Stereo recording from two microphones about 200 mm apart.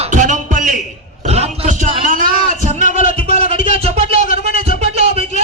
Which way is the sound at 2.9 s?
45° left (ahead or behind).